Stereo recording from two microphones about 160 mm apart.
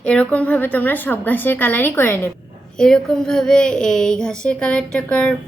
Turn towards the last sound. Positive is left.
turn(degrees=5)  # may be behind; listen again after turning